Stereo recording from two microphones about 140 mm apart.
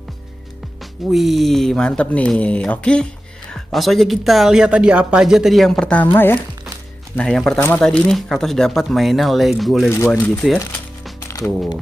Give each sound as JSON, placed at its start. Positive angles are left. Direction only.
{"t": 1.1, "sound": "speech", "side_deg": 0}
{"t": 7.2, "sound": "speech", "side_deg": 5}
{"t": 9.8, "sound": "speech", "side_deg": 20}
{"t": 11.1, "sound": "coin", "side_deg": 25}